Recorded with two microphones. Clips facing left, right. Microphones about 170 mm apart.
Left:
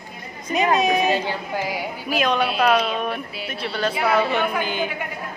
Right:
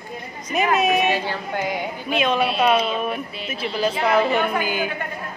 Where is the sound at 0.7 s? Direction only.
5° right (ahead or behind).